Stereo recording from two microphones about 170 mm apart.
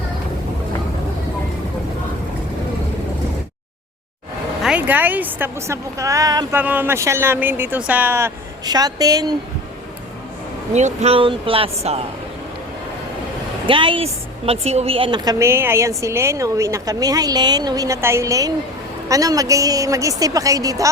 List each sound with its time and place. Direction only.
4.6 s a woman's voice: 10° right (ahead or behind)
10.8 s speech: 40° right (ahead or behind)
13.7 s a woman's voice: 30° right (ahead or behind)